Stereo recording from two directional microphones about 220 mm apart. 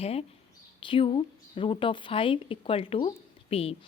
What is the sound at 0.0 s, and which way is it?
A woman's voice, 25° left (ahead or behind).